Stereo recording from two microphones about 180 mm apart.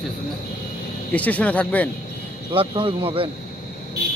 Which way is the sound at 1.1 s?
10° left (ahead or behind).